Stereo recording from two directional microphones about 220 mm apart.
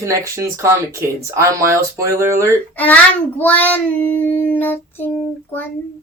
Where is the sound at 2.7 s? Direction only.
5° left (ahead or behind).